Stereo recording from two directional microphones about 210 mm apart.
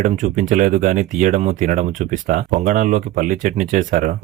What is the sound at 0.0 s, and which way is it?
Speech, 35° right (ahead or behind).